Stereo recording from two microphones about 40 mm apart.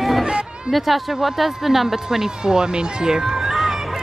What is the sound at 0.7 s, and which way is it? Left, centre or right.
Speech, centre.